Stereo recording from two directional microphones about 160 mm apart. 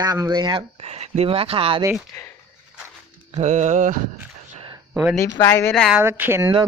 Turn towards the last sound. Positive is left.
turn(degrees=-15)  # may be behind; listen again after turning